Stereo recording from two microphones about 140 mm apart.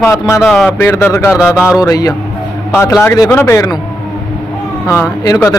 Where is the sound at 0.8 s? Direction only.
15° left (ahead or behind).